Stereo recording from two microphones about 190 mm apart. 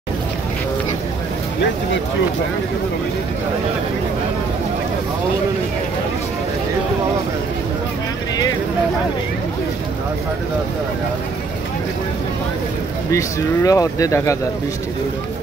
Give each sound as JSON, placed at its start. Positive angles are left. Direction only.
{"t": 13.1, "sound": "speech", "side_deg": 15}